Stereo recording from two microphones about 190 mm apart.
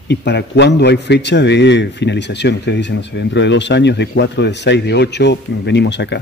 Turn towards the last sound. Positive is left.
turn(degrees=65)  # may be behind; listen again after turning